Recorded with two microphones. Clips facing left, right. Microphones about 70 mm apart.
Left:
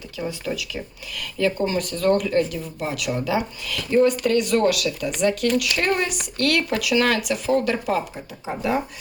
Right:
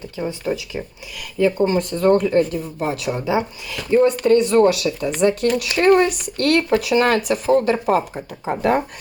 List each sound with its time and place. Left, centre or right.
0.2 s speech: right
8.4 s speech: right